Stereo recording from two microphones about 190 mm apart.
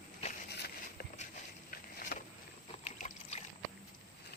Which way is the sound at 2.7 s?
35° left (ahead or behind).